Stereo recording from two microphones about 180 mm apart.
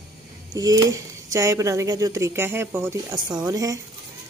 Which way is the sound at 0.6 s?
20° right (ahead or behind).